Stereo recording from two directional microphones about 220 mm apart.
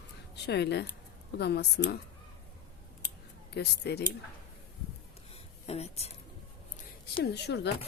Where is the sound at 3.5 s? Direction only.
50° left (ahead or behind).